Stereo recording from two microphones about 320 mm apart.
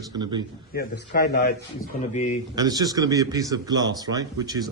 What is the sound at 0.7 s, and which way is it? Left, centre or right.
A man's voice, left.